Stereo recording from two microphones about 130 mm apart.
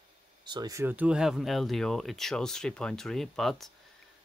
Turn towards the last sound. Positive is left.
turn(degrees=0)  # may be behind; listen again after turning